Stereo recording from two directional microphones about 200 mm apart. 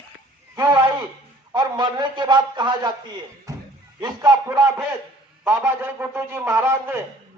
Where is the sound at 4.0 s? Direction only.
20° right (ahead or behind).